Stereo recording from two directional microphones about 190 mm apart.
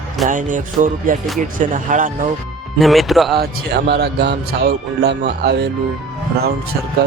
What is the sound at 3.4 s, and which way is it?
A man's voice, 60° right (ahead or behind).